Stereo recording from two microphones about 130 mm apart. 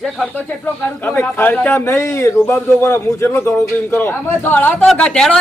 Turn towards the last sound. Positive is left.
turn(degrees=5)  # may be behind; listen again after turning